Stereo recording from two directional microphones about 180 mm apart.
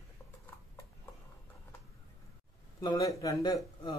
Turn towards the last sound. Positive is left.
turn(degrees=25)  # may be behind; listen again after turning